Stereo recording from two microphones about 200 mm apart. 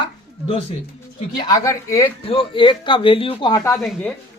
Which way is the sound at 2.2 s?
25° left (ahead or behind).